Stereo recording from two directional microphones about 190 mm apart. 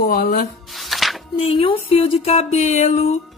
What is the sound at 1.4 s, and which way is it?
A child's voice, 30° left (ahead or behind).